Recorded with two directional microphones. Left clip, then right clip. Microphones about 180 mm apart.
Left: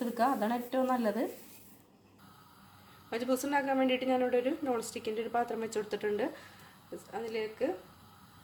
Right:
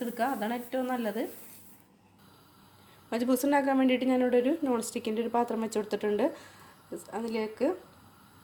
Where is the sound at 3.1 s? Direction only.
35° right (ahead or behind).